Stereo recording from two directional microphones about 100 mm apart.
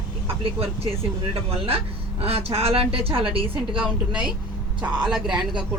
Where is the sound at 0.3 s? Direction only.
75° right (ahead or behind).